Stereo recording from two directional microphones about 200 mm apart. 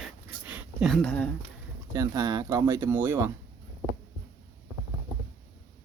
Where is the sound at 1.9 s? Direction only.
20° right (ahead or behind).